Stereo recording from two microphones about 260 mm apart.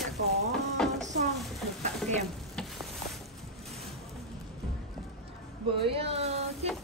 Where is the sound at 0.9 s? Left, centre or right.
Right.